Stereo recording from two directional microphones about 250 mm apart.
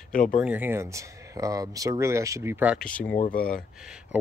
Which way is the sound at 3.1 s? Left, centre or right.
Left.